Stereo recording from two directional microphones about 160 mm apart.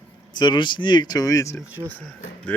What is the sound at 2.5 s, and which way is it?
Speech, 10° left (ahead or behind).